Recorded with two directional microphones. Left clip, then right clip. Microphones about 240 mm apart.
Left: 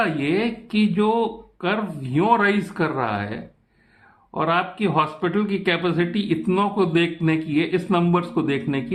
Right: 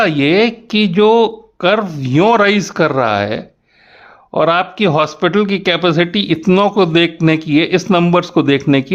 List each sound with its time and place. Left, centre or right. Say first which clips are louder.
0.0 s a man's voice: right 10 dB; right